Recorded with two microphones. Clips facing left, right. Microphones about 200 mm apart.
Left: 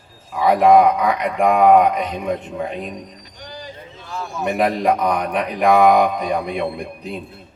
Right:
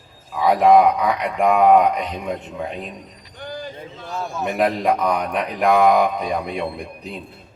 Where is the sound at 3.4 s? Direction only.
55° right (ahead or behind).